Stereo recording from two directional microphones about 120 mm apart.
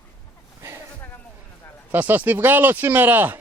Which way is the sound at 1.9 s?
15° right (ahead or behind).